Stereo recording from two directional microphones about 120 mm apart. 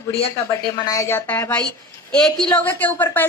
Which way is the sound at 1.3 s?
15° left (ahead or behind).